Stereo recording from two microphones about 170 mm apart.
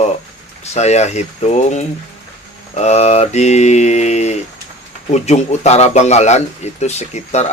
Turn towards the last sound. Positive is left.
turn(degrees=40)  # may be behind; listen again after turning